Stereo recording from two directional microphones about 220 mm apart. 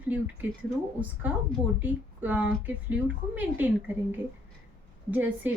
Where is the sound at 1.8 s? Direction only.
10° right (ahead or behind).